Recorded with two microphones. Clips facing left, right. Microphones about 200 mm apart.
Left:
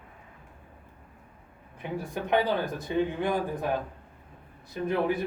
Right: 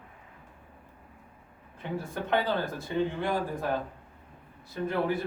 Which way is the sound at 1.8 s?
15° left (ahead or behind).